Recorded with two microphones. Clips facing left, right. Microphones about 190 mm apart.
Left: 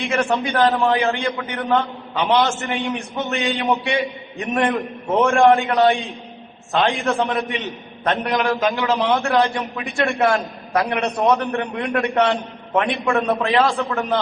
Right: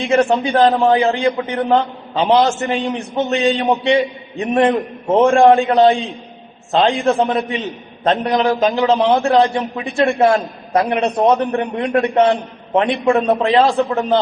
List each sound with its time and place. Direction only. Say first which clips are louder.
0.3 s a man's voice: right 4 dB; 25° right (ahead or behind)